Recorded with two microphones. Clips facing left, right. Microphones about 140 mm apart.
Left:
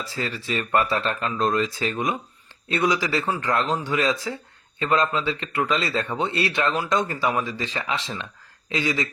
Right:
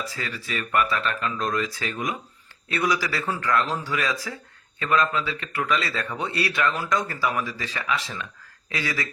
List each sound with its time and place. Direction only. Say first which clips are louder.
0.0 s speech: left 3 dB; 30° left (ahead or behind)